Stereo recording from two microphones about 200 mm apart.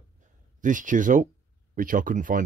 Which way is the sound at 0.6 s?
40° right (ahead or behind).